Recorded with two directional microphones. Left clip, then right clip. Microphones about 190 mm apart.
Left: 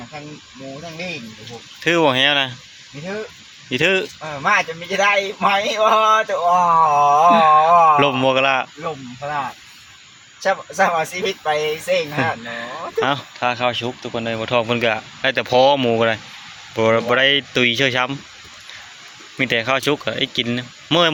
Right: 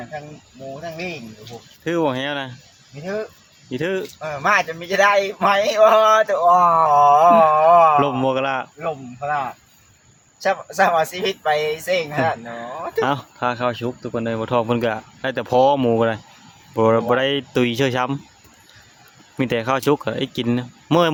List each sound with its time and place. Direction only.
1.8 s speech: centre (ahead or behind)
3.7 s speech: centre (ahead or behind)
4.2 s speech: 15° right (ahead or behind)
6.7 s speech: 25° right (ahead or behind)
6.9 s speech: 10° right (ahead or behind)
10.4 s speech: 15° right (ahead or behind)
12.1 s speech: 5° right (ahead or behind); by 18.2 s 30° right (ahead or behind)
19.4 s speech: 30° right (ahead or behind)